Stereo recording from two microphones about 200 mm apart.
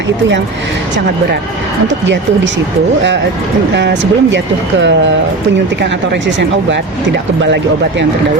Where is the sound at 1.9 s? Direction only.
65° right (ahead or behind).